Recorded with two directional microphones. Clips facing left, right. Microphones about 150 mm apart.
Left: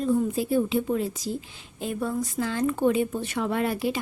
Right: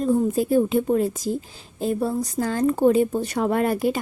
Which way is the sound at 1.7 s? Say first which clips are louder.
Right 5 dB; 35° right (ahead or behind).